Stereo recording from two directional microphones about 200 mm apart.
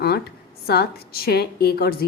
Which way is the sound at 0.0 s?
55° left (ahead or behind).